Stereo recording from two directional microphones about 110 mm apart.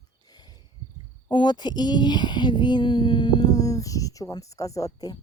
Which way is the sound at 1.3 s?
45° left (ahead or behind).